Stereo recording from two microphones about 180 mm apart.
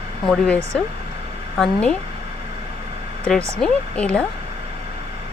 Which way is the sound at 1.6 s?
5° left (ahead or behind).